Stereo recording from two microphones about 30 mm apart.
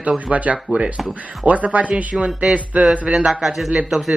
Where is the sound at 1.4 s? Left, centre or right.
Right.